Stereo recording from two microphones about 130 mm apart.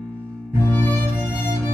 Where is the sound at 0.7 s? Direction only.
15° left (ahead or behind).